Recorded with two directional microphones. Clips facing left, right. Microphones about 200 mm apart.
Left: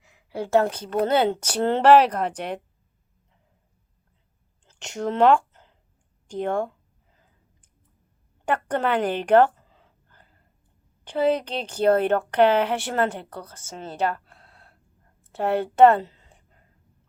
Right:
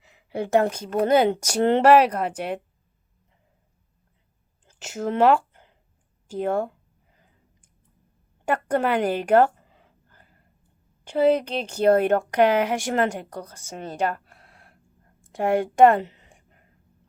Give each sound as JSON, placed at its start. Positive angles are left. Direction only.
{"t": 0.1, "sound": "a woman's voice", "side_deg": -20}
{"t": 4.6, "sound": "a sound", "side_deg": -5}
{"t": 6.2, "sound": "speech", "side_deg": -5}
{"t": 8.4, "sound": "speech", "side_deg": -10}
{"t": 11.0, "sound": "a woman's voice", "side_deg": -10}